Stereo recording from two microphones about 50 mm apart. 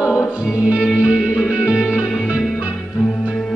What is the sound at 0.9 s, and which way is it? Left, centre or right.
Music, centre.